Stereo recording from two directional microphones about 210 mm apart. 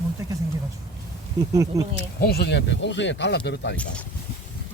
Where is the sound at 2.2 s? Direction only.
50° left (ahead or behind).